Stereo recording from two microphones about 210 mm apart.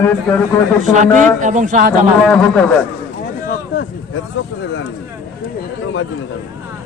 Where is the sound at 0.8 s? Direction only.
35° right (ahead or behind).